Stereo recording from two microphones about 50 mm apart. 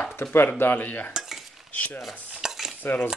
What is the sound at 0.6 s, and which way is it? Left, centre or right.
Speech, left.